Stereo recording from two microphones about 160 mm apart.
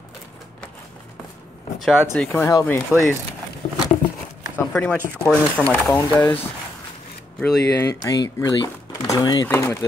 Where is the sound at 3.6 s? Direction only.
50° left (ahead or behind).